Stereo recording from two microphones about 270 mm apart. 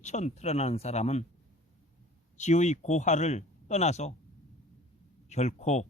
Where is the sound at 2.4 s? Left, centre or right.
Left.